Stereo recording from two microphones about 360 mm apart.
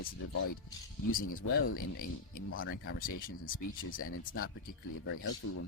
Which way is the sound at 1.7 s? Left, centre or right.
Left.